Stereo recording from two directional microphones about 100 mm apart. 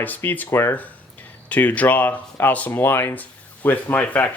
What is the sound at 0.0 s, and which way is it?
Speech, 20° left (ahead or behind).